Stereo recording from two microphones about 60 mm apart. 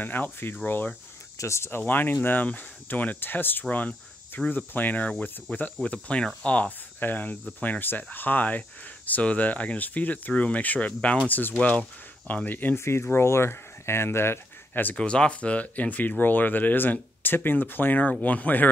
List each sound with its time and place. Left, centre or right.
0.0 s speech: left
1.4 s speech: left
1.8 s speech: left
3.7 s cricket: left
4.5 s speech: left
7.0 s speech: left
12.7 s speech: left
14.7 s speech: left
15.0 s speech: centre